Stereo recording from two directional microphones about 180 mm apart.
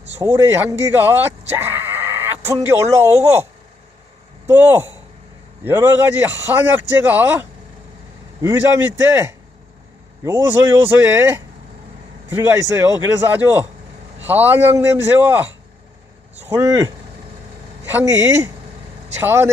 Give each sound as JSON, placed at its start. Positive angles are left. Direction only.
{"t": 0.0, "sound": "a man's voice", "side_deg": -15}
{"t": 4.4, "sound": "a man's voice", "side_deg": -15}